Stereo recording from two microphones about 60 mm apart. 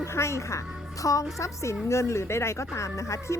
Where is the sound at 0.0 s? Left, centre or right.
Left.